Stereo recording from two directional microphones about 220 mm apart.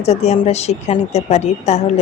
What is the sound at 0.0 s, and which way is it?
Speech, 30° left (ahead or behind).